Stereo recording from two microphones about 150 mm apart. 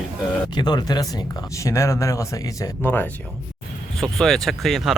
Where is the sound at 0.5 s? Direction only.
30° left (ahead or behind).